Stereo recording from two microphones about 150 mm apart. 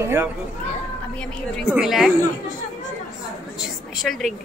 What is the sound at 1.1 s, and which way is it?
Speech, 5° left (ahead or behind).